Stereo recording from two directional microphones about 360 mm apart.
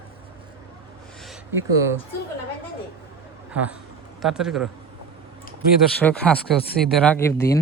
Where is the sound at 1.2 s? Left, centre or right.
Centre.